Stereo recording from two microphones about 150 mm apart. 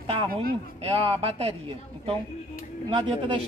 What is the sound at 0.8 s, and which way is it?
Speech, 40° right (ahead or behind).